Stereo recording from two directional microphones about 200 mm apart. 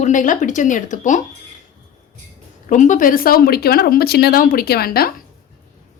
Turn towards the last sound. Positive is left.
turn(degrees=50)  # may be behind; listen again after turning